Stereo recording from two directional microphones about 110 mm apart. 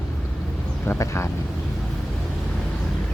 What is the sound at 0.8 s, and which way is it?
Speech, 25° left (ahead or behind).